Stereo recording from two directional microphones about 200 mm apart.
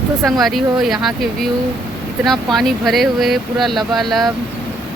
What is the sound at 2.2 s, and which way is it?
Speech, centre (ahead or behind).